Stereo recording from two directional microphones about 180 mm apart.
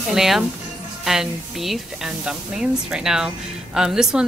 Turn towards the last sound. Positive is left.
turn(degrees=-5)  # may be behind; listen again after turning